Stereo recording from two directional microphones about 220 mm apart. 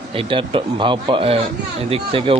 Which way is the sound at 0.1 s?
25° right (ahead or behind).